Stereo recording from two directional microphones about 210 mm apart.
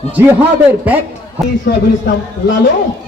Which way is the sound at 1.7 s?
50° left (ahead or behind).